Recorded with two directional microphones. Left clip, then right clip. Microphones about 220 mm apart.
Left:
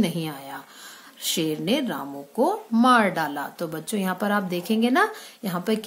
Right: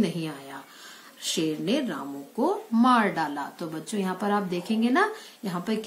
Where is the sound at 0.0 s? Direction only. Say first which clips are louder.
Left 2 dB; 45° left (ahead or behind).